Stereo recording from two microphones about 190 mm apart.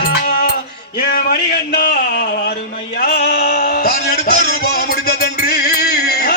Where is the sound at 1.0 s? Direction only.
55° left (ahead or behind).